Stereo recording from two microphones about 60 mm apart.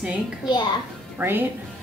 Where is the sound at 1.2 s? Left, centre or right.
Right.